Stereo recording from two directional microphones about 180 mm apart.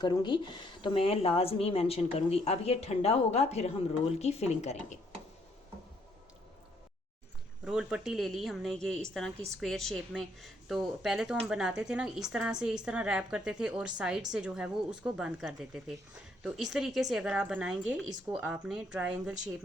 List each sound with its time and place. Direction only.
0.0 s speech: 25° left (ahead or behind)
7.6 s speech: 5° right (ahead or behind)